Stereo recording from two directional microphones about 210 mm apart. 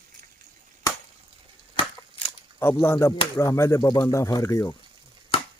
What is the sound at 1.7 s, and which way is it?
Crushing, 25° left (ahead or behind).